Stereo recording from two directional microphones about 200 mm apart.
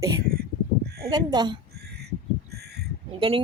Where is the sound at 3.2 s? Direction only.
25° right (ahead or behind).